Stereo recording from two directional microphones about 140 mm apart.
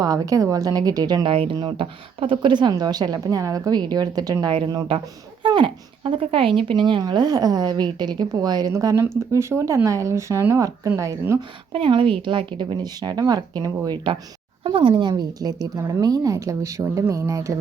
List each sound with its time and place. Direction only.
0.0 s speech: 25° right (ahead or behind)
11.7 s speech: 40° right (ahead or behind); by 17.5 s 20° right (ahead or behind)